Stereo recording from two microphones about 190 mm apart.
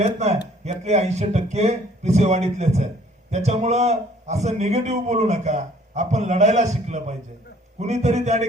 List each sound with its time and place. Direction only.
0.0 s a man's voice: 35° right (ahead or behind)